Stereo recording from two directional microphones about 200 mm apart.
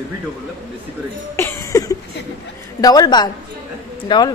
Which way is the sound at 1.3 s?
15° left (ahead or behind).